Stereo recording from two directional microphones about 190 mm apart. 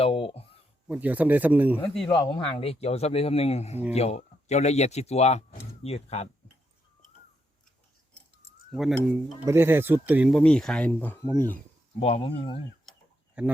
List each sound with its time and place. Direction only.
0.0 s speech: 30° left (ahead or behind)
0.9 s speech: 10° right (ahead or behind)
2.0 s speech: 20° left (ahead or behind)
8.7 s speech: centre (ahead or behind)
9.5 s speech: 10° right (ahead or behind); by 11.6 s 10° left (ahead or behind)
11.9 s speech: 30° left (ahead or behind)
13.4 s speech: 5° right (ahead or behind)